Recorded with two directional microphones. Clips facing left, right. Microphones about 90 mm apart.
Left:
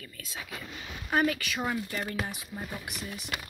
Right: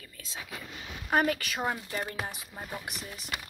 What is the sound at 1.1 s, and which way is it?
Speech, 45° right (ahead or behind).